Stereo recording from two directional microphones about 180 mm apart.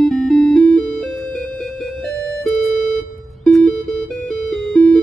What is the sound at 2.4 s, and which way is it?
Music, centre (ahead or behind).